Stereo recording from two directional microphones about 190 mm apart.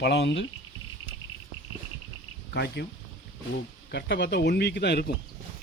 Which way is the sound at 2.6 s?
60° left (ahead or behind).